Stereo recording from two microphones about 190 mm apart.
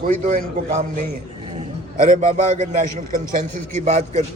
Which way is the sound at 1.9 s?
35° right (ahead or behind).